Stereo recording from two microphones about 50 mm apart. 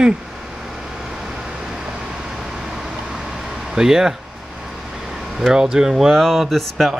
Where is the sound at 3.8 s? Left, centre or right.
Centre.